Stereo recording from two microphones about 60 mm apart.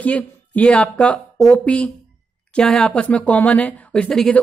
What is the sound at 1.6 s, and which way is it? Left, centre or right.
Speech, left.